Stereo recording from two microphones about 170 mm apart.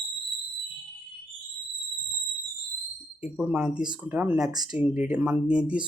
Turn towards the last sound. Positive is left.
turn(degrees=-5)  # may be behind; listen again after turning